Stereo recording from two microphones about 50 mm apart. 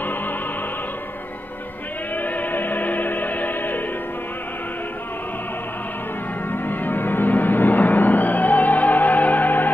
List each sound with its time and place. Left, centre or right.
2.1 s music: left
6.5 s music: left